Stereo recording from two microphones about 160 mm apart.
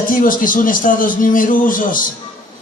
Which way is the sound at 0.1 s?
60° left (ahead or behind).